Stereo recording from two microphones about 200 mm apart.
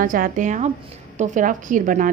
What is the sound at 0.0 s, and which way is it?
A woman's voice, 45° right (ahead or behind).